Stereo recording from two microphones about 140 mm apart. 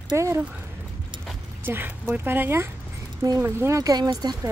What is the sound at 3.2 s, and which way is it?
Speech, 25° right (ahead or behind).